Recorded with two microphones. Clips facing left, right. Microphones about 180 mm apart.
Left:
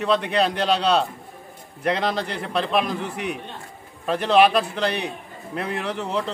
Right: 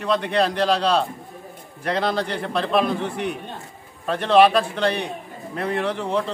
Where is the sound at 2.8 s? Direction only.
30° right (ahead or behind).